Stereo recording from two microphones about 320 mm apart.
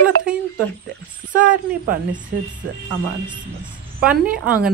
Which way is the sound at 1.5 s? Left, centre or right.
Right.